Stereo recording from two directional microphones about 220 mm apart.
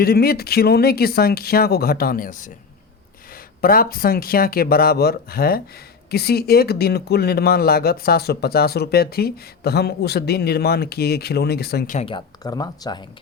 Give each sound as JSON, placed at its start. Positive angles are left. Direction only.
{"t": 0.0, "sound": "speech", "side_deg": 45}
{"t": 3.6, "sound": "speech", "side_deg": 40}
{"t": 11.9, "sound": "speech", "side_deg": 25}